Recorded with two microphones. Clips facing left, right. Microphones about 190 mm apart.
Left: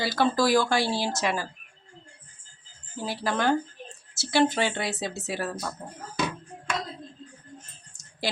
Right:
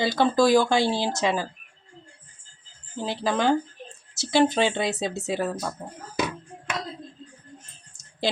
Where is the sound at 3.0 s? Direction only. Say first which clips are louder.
Right 3 dB; 20° right (ahead or behind).